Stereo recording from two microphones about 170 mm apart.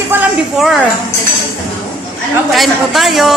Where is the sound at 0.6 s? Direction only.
Centre (ahead or behind).